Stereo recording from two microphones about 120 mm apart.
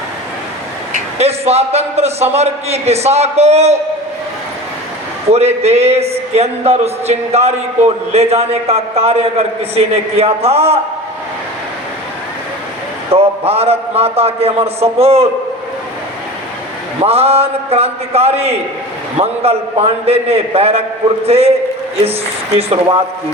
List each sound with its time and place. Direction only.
0.9 s a man's voice: 60° right (ahead or behind)
5.3 s speech: 60° right (ahead or behind)
13.1 s speech: 55° right (ahead or behind)
17.0 s speech: 55° right (ahead or behind)
22.5 s speech: 55° right (ahead or behind)